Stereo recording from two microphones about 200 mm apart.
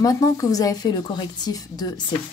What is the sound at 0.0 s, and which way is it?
Speech, 15° left (ahead or behind).